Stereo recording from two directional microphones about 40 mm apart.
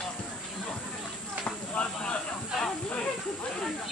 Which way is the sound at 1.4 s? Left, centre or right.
Left.